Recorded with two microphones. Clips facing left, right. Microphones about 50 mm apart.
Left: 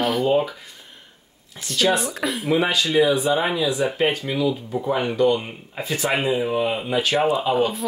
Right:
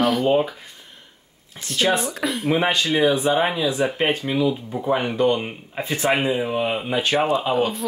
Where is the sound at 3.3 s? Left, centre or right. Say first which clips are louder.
Right 1 dB; centre.